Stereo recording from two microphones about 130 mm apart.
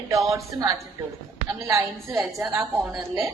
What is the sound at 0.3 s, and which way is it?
A woman's voice, 25° right (ahead or behind).